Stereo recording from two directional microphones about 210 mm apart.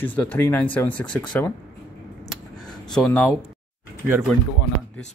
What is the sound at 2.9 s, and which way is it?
Speech, 5° left (ahead or behind).